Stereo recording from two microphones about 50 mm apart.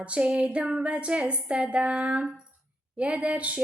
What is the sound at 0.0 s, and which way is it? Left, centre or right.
Female singing, right.